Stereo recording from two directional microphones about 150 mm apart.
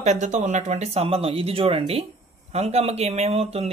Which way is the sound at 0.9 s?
40° right (ahead or behind).